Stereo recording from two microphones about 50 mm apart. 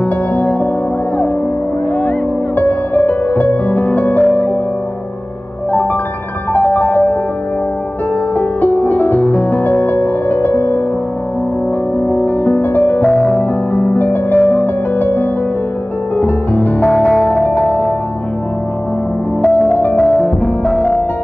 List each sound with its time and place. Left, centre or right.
0.0 s music: left
2.0 s music: left
6.5 s music: left
8.4 s music: left
12.6 s music: left
13.0 s music: centre
13.4 s music: left
19.4 s music: left